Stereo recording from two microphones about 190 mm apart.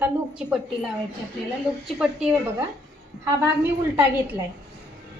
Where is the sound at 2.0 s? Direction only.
5° right (ahead or behind).